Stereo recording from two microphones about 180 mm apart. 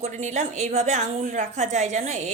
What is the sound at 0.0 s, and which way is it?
A woman's voice, 40° right (ahead or behind).